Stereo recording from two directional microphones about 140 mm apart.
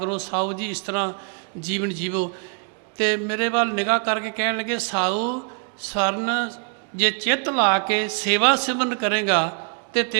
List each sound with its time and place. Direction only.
0.0 s speech: 25° right (ahead or behind)
0.5 s a man's voice: 10° right (ahead or behind)
1.6 s a man's voice: 5° right (ahead or behind)
6.9 s a man's voice: 10° right (ahead or behind)
7.5 s a man's voice: 25° right (ahead or behind)
9.4 s speech: 25° right (ahead or behind)